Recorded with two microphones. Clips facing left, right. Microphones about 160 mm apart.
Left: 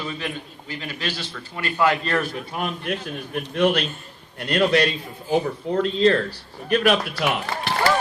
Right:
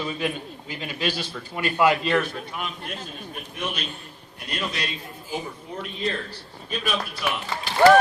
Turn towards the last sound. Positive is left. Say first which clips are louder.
# left 4 dB
turn(degrees=65)  # may be behind; listen again after turning